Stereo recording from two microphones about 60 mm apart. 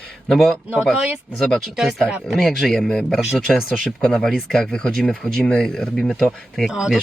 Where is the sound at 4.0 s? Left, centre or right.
Centre.